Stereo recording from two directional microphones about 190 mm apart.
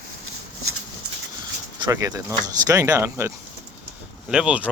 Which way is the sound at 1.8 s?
20° right (ahead or behind).